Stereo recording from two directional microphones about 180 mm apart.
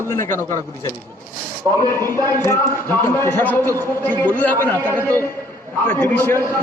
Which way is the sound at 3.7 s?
15° right (ahead or behind).